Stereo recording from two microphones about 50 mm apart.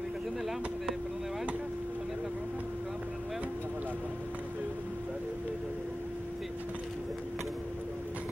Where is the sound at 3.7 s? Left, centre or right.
Right.